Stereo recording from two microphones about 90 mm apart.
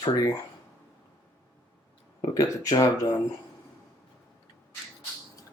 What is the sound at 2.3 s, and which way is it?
Speech, 40° left (ahead or behind).